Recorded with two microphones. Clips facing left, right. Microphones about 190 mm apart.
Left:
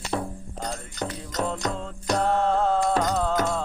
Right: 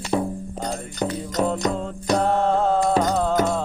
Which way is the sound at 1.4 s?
15° right (ahead or behind).